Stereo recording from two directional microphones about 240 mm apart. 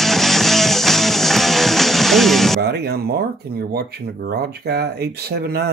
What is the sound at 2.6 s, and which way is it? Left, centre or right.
Speech, right.